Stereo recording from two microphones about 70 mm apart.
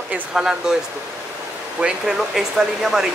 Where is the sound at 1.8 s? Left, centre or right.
Centre.